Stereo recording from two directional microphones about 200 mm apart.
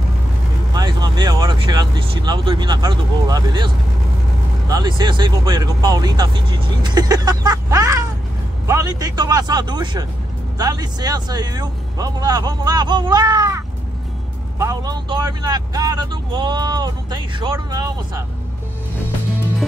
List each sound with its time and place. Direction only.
0.7 s speech: 20° right (ahead or behind)